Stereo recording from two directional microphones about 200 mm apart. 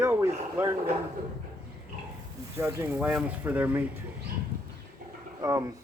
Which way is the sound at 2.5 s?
10° right (ahead or behind).